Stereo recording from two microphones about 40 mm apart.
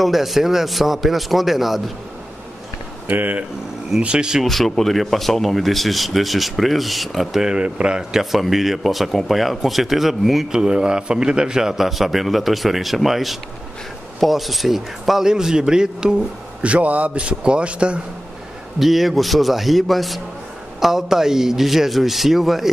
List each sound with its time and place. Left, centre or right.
0.0 s speech: centre
3.1 s speech: right
4.0 s a man's voice: right
4.5 s speech: centre
7.5 s a man's voice: right
8.1 s speech: centre
10.5 s a man's voice: centre
11.7 s a man's voice: centre
16.6 s a man's voice: right
18.8 s speech: centre